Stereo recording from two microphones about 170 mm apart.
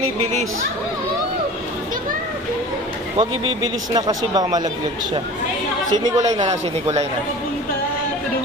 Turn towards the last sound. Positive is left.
turn(degrees=-40)  # may be behind; listen again after turning